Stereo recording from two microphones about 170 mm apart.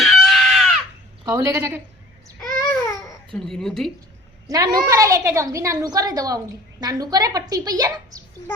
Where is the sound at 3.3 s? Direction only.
5° left (ahead or behind).